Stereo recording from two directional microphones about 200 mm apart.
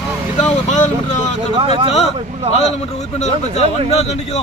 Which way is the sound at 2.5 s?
35° left (ahead or behind).